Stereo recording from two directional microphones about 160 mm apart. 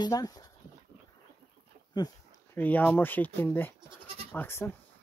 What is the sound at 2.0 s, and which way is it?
Speech, 25° left (ahead or behind).